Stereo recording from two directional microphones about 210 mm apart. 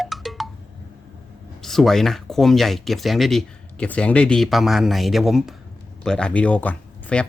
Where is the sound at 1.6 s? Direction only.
Centre (ahead or behind).